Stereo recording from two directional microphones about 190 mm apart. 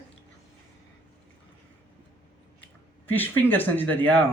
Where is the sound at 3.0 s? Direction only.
10° left (ahead or behind).